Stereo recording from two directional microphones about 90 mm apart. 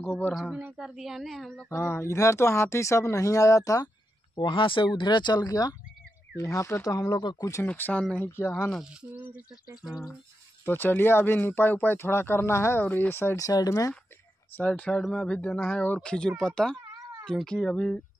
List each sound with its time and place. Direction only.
0.0 s speech: 25° left (ahead or behind)
0.3 s a woman's voice: 5° right (ahead or behind)
1.7 s speech: 30° left (ahead or behind)
4.4 s speech: 70° left (ahead or behind)
4.9 s speech: 60° left (ahead or behind)
7.6 s speech: 20° left (ahead or behind)
8.3 s speech: 30° left (ahead or behind)
9.8 s speech: 5° right (ahead or behind)
10.6 s speech: 25° left (ahead or behind)
13.4 s speech: 40° left (ahead or behind)
14.6 s speech: 15° left (ahead or behind)
16.7 s cat: 25° right (ahead or behind)
17.3 s speech: 5° left (ahead or behind)